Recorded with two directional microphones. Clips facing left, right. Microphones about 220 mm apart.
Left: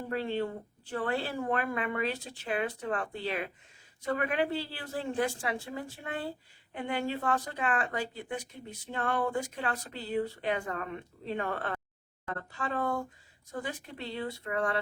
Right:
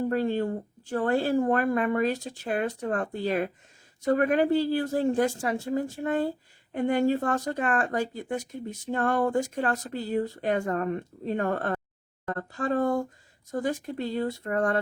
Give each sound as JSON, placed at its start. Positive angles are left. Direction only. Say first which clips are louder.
{"t": 0.1, "sound": "speech", "louder": "right 6 dB", "side_deg": -45}